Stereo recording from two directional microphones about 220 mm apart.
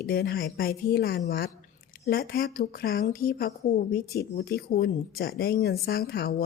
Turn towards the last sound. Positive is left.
turn(degrees=45)  # may be behind; listen again after turning